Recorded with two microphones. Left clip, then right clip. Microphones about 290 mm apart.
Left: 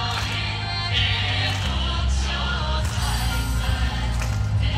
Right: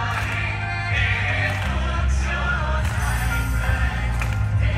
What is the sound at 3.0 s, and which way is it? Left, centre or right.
Music, centre.